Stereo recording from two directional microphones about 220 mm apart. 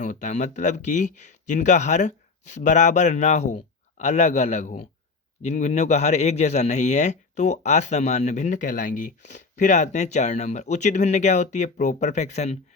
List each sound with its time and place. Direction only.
0.0 s a man's voice: 35° left (ahead or behind)